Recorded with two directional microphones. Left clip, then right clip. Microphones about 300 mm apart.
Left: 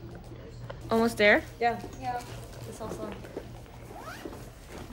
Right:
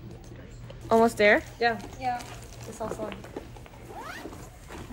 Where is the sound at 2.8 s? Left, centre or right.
Right.